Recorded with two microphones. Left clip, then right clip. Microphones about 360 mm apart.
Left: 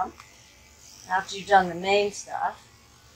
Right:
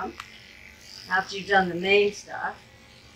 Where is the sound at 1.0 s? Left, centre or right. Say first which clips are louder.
Right 1 dB; centre.